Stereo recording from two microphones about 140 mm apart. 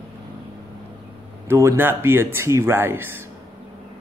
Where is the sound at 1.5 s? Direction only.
20° right (ahead or behind).